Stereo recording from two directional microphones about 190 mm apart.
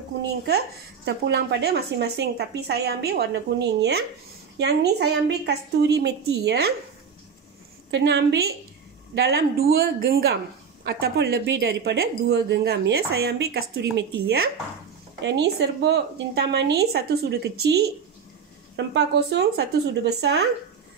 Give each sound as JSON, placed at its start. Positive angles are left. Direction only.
{"t": 0.5, "sound": "a woman's voice", "side_deg": -60}
{"t": 7.9, "sound": "a woman's voice", "side_deg": -65}
{"t": 18.9, "sound": "a woman's voice", "side_deg": -60}